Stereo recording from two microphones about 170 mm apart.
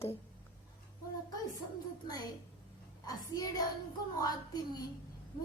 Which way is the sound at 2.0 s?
25° left (ahead or behind).